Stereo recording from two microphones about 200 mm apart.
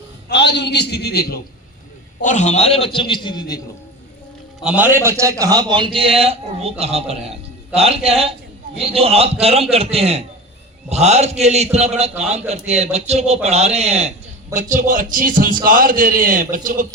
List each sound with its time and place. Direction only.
0.3 s a man's voice: 60° left (ahead or behind)
2.2 s a man's voice: 35° left (ahead or behind); by 3.6 s 20° left (ahead or behind)
4.6 s a man's voice: 5° right (ahead or behind); by 16.8 s 45° right (ahead or behind)